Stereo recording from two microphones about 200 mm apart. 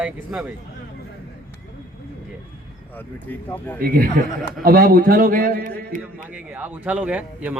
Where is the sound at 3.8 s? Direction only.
45° right (ahead or behind).